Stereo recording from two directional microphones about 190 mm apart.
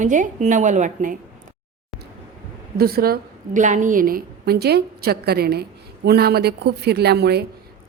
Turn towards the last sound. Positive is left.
turn(degrees=-60)  # may be behind; listen again after turning